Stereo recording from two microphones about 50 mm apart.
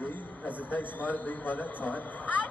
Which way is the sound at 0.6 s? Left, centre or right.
Left.